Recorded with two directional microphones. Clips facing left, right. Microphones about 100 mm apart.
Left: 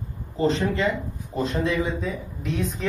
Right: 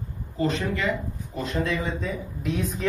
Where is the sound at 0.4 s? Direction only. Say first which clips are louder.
Left 3 dB; 30° left (ahead or behind).